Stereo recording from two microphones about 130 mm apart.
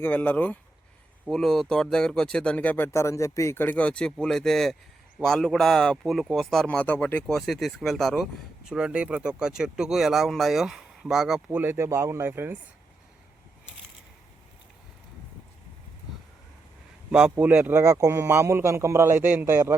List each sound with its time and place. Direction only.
0.0 s speech: 15° left (ahead or behind)
1.3 s speech: 5° left (ahead or behind); by 12.5 s 15° right (ahead or behind)
17.1 s a man's voice: 5° right (ahead or behind)